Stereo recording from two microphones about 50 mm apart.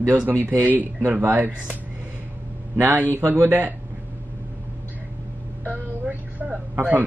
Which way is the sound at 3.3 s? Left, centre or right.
Right.